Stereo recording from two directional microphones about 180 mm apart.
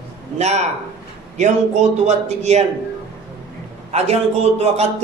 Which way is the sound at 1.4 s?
40° right (ahead or behind).